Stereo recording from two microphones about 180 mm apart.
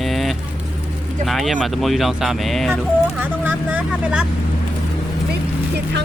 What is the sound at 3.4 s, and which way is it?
Speech, 10° right (ahead or behind).